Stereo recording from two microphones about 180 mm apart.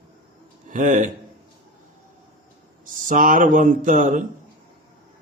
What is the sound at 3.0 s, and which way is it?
Speech, 50° right (ahead or behind).